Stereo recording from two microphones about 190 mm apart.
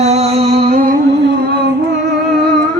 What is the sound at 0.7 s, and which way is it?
Music, 50° right (ahead or behind).